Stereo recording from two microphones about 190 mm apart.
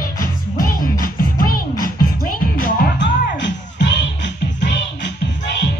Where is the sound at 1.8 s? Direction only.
50° left (ahead or behind).